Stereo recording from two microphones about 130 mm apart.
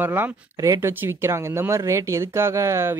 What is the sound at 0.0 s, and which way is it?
Speech, 15° right (ahead or behind).